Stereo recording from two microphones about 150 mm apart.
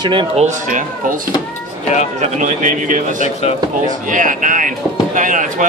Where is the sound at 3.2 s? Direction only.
45° left (ahead or behind).